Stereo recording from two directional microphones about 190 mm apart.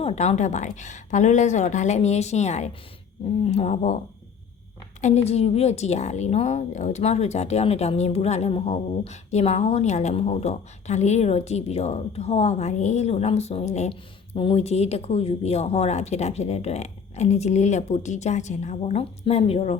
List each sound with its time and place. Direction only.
0.0 s a woman's voice: 35° left (ahead or behind)
4.9 s a woman's voice: 35° left (ahead or behind)